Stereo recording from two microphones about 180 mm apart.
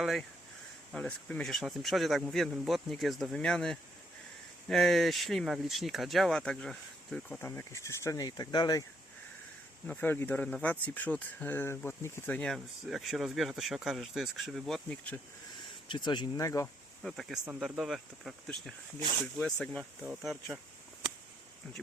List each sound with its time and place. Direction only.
0.0 s speech: centre (ahead or behind); by 8.8 s 25° left (ahead or behind)
9.8 s speech: 10° left (ahead or behind)
15.9 s speech: 25° left (ahead or behind)
17.0 s speech: centre (ahead or behind)
18.9 s speech: 25° right (ahead or behind)
19.2 s speech: 5° left (ahead or behind)